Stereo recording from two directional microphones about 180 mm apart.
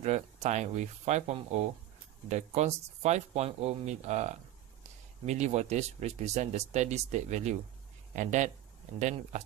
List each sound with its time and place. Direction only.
0.0 s speech: 40° right (ahead or behind)